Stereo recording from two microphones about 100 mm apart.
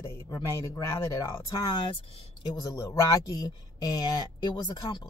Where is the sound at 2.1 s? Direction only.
80° left.